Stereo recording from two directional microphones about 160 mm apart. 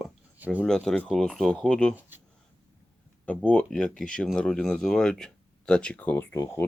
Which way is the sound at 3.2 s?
10° left (ahead or behind).